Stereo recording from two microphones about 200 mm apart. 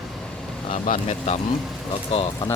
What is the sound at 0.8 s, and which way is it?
Speech, 40° left (ahead or behind).